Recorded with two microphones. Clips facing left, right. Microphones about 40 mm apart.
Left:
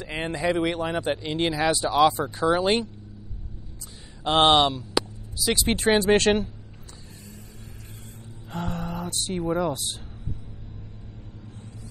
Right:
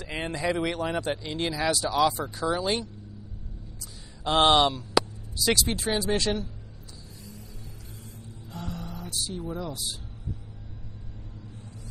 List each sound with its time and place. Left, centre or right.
0.2 s speech: left
4.2 s speech: left
5.0 s a sound: centre
5.7 s speech: left
8.5 s speech: left